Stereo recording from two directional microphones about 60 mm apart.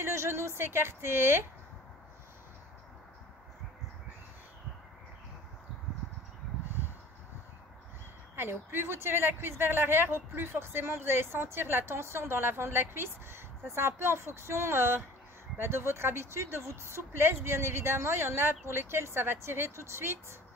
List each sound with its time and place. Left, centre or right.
0.0 s speech: right
8.4 s speech: right